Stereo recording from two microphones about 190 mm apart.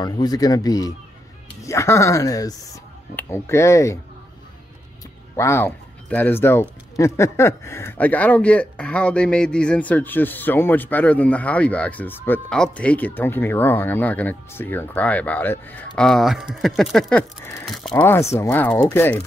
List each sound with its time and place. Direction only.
0.0 s speech: 20° left (ahead or behind)
5.3 s speech: 15° left (ahead or behind)
18.3 s speech: 10° left (ahead or behind)